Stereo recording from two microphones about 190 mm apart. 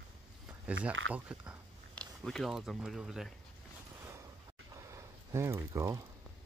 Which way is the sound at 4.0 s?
15° right (ahead or behind).